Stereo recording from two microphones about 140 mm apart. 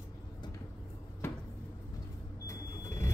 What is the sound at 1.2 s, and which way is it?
Cupboard open or close, 15° left (ahead or behind).